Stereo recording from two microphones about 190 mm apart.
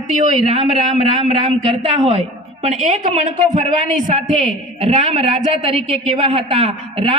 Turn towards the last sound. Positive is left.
turn(degrees=-30)  # may be behind; listen again after turning